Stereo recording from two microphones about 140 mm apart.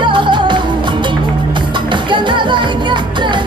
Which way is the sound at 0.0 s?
35° right (ahead or behind).